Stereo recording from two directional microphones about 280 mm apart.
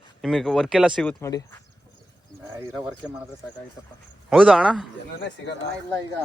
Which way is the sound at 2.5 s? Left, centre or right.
Centre.